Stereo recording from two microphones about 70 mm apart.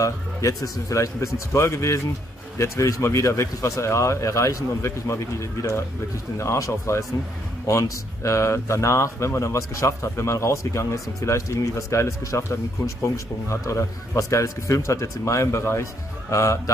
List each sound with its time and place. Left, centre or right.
0.0 s speech: left
3.0 s speech: left